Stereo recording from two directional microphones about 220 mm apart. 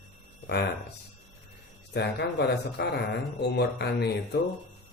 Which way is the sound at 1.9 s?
50° left (ahead or behind).